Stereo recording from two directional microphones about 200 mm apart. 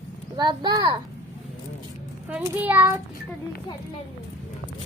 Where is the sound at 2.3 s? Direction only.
5° right (ahead or behind).